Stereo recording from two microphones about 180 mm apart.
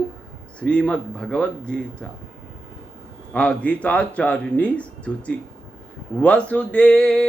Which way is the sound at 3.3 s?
5° left (ahead or behind).